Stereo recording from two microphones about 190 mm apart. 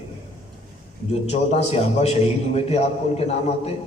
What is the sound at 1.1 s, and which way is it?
A man's voice, 35° left (ahead or behind).